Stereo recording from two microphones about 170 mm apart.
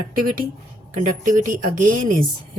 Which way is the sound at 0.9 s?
50° right (ahead or behind).